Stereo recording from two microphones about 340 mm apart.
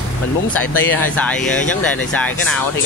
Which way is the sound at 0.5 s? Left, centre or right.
Centre.